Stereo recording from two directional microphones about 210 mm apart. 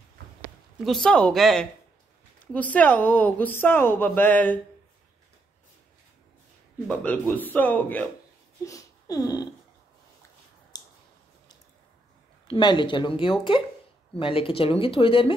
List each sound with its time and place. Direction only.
0.8 s speech: centre (ahead or behind)
6.9 s speech: 5° left (ahead or behind)
8.6 s a sound: 15° left (ahead or behind)
10.7 s clicking: 20° left (ahead or behind)
12.4 s speech: 20° left (ahead or behind)